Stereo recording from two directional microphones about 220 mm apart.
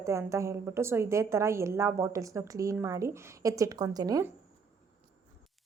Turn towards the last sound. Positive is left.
turn(degrees=-15)  # may be behind; listen again after turning